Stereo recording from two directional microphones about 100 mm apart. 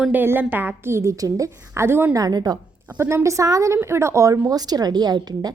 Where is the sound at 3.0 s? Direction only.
25° right (ahead or behind).